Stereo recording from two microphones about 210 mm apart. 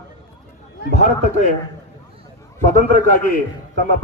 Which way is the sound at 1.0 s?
35° left (ahead or behind).